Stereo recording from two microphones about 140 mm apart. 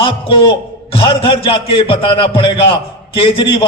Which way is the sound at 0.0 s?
40° left (ahead or behind).